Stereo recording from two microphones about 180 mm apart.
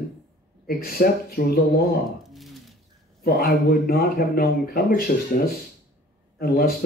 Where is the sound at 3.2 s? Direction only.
60° left (ahead or behind).